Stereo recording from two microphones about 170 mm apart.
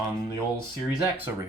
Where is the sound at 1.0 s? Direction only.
10° right (ahead or behind).